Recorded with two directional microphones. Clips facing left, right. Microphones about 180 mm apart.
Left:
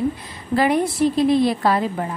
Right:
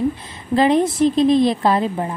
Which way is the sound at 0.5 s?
20° right (ahead or behind).